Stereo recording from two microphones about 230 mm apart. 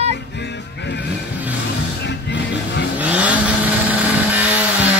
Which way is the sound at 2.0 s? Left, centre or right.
Left.